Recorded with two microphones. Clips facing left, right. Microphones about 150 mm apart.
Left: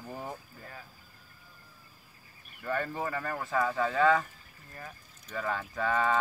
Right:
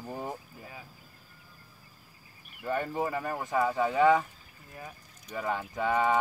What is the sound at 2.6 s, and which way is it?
Speech, 15° right (ahead or behind).